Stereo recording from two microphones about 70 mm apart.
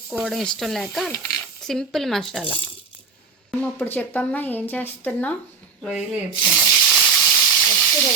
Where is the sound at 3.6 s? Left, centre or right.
Left.